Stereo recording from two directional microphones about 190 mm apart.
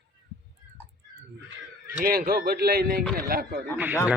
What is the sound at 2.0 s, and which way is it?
Speech, 50° right (ahead or behind).